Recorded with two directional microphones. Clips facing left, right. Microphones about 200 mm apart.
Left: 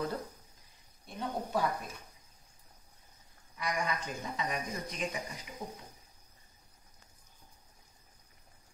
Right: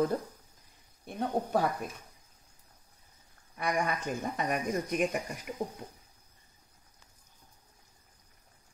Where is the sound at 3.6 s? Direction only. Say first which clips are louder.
Right 4 dB; 55° right (ahead or behind).